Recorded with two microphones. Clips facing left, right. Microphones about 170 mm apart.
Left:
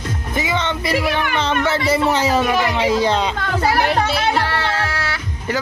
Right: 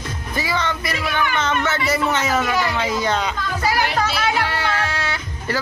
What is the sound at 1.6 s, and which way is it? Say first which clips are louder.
Speech: left 4 dB; 30° left (ahead or behind).